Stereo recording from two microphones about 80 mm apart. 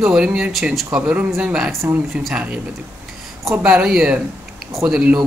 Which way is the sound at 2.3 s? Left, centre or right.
Centre.